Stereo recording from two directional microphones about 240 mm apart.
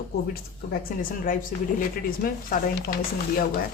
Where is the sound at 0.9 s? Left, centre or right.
Left.